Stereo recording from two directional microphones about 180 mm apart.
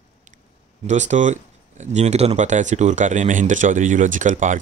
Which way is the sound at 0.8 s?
40° right (ahead or behind).